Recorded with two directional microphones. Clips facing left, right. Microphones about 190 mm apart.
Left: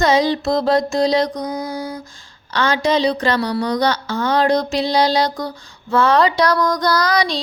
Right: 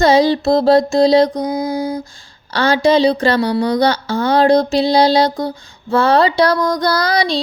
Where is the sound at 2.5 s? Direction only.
35° right (ahead or behind).